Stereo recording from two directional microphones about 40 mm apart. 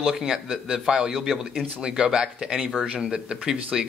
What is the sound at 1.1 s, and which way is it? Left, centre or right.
Speech, centre.